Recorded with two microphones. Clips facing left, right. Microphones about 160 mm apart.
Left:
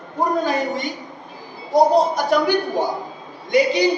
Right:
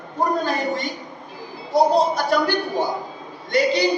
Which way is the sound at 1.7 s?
15° left (ahead or behind).